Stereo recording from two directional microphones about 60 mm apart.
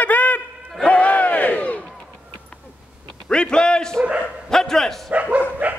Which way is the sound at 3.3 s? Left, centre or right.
Centre.